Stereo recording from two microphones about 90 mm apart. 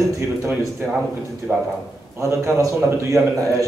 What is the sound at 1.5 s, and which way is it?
A man's voice, 25° right (ahead or behind).